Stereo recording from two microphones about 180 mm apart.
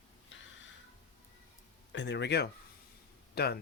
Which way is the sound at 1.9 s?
80° left.